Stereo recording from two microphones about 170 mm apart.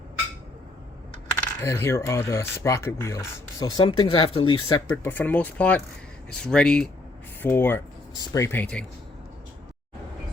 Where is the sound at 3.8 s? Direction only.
30° left (ahead or behind).